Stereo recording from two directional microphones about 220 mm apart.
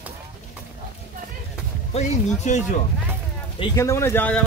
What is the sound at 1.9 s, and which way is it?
Speech, 30° left (ahead or behind).